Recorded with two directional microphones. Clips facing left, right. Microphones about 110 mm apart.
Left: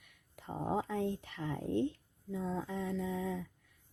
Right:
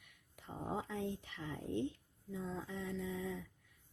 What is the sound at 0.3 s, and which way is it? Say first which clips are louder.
Speech: left 6 dB; 55° left (ahead or behind).